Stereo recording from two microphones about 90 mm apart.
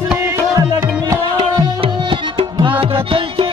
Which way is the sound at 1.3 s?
75° right (ahead or behind).